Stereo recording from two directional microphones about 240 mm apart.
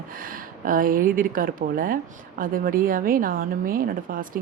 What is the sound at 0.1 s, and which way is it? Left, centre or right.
A woman's voice, right.